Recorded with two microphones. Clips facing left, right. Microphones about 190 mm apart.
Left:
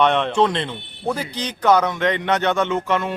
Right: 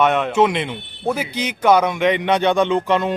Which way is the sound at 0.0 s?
5° right (ahead or behind).